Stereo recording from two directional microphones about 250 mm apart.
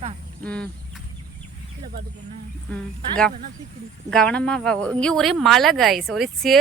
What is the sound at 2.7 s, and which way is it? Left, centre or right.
Speech, centre.